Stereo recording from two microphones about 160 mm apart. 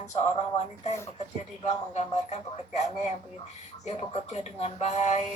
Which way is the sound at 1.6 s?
45° left (ahead or behind).